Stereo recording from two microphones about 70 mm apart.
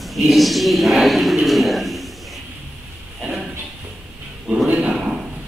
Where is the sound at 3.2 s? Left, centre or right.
Centre.